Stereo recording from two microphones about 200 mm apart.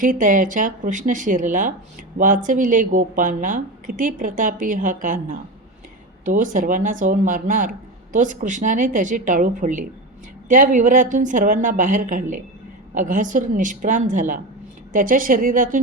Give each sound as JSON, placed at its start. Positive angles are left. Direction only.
{"t": 0.0, "sound": "a woman's voice", "side_deg": -40}